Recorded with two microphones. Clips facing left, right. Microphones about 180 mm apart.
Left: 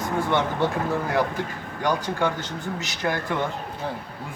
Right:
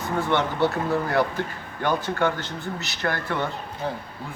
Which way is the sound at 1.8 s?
10° left (ahead or behind).